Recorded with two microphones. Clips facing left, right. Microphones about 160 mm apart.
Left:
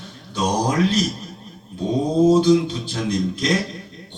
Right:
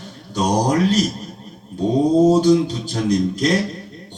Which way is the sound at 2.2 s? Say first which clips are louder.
Right 1 dB; 40° right (ahead or behind).